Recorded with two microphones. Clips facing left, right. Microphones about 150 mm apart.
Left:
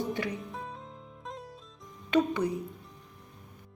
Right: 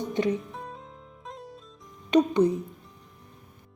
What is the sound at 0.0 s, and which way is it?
Music, 20° right (ahead or behind).